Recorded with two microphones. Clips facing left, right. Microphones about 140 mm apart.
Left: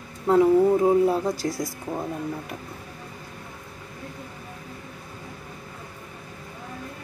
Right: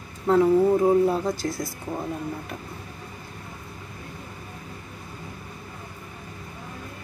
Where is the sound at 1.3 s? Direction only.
35° left (ahead or behind).